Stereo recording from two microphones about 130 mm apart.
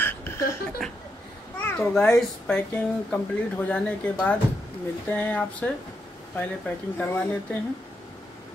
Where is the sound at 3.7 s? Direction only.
10° left (ahead or behind).